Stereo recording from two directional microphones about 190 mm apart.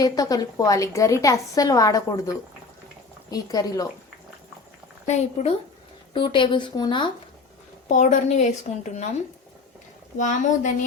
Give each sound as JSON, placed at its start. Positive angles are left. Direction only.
{"t": 0.0, "sound": "a woman's voice", "side_deg": 20}
{"t": 5.0, "sound": "a woman's voice", "side_deg": 35}
{"t": 7.9, "sound": "a woman's voice", "side_deg": 40}
{"t": 10.2, "sound": "a woman's voice", "side_deg": 40}